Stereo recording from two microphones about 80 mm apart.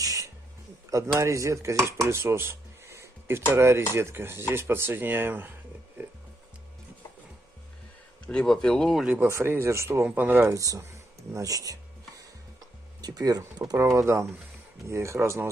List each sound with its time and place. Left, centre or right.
0.0 s music: right
0.8 s a man's voice: right
1.2 s dishes: right
3.5 s speech: right
3.9 s dishes: right
8.3 s speech: centre
9.0 s speech: centre
9.3 s speech: right
10.0 s dishes: right
10.5 s a sound: right
13.0 s speech: right
13.7 s speech: right